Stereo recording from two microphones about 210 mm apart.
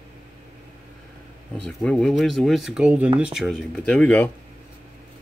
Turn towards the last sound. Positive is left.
turn(degrees=5)  # may be behind; listen again after turning